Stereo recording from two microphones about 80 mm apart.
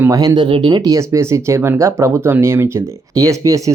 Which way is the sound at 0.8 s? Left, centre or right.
Right.